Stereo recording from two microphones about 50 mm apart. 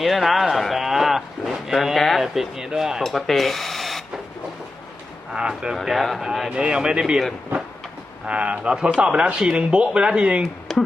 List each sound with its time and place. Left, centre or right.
0.0 s a sound: centre
2.7 s speech: centre
3.0 s speech: centre
5.3 s speech: centre
5.7 s speech: centre
6.5 s speech: centre
8.3 s speech: right
10.4 s speech: centre